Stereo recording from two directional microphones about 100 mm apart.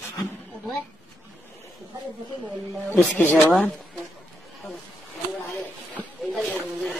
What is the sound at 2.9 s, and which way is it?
Speech, 15° left (ahead or behind).